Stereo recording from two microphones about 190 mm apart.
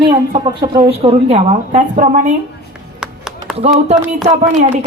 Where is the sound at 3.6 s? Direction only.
40° right (ahead or behind).